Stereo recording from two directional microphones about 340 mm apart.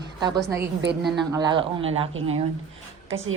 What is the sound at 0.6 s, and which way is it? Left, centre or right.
Speech, right.